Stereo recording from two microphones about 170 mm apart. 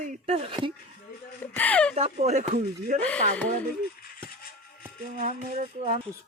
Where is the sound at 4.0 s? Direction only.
60° left (ahead or behind).